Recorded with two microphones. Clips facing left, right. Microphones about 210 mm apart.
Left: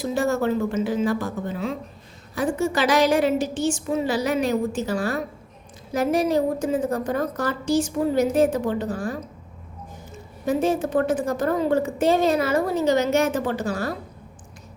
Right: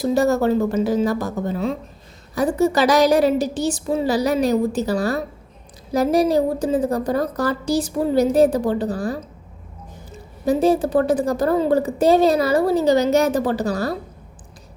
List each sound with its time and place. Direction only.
0.0 s a woman's voice: 40° right (ahead or behind)